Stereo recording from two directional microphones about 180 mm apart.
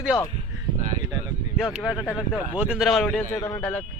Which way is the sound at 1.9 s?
10° left (ahead or behind).